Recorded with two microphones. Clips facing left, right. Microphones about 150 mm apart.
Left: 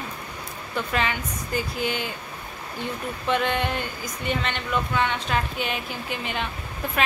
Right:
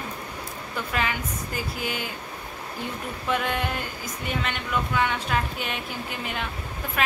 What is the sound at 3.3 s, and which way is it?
Speech, 5° right (ahead or behind).